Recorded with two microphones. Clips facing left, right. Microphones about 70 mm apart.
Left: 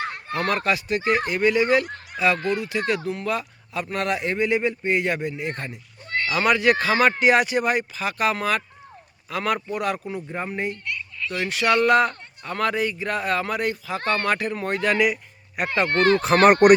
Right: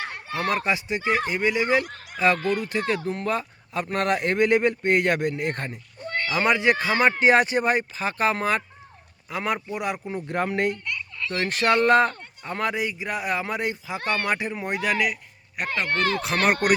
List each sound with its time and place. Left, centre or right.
0.3 s speech: centre
2.1 s speech: right
6.2 s speech: right
10.2 s speech: right
11.3 s speech: right
12.4 s speech: right
14.9 s speech: centre